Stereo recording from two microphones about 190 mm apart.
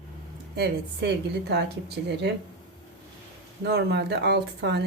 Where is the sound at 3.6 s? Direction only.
60° right (ahead or behind).